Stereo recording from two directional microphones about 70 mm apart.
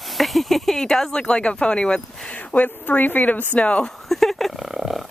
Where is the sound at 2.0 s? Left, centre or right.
Centre.